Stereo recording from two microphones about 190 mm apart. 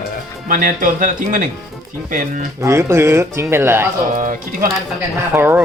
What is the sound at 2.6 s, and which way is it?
Speech, 15° right (ahead or behind).